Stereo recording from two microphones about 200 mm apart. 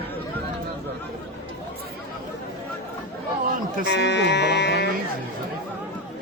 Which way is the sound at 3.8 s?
60° left (ahead or behind).